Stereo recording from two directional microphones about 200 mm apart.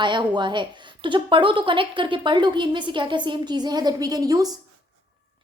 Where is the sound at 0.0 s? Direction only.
25° right (ahead or behind).